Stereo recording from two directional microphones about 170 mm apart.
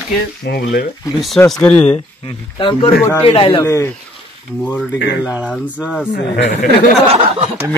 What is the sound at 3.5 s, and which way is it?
Speech, 20° left (ahead or behind).